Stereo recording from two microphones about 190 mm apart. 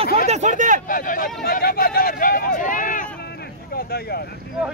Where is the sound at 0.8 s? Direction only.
45° left (ahead or behind).